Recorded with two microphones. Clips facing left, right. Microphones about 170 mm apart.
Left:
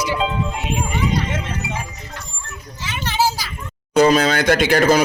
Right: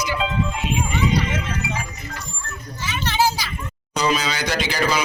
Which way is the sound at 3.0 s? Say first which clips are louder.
Left 1 dB; 5° left (ahead or behind).